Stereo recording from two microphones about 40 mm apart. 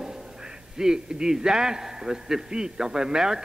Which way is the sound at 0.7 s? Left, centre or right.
Centre.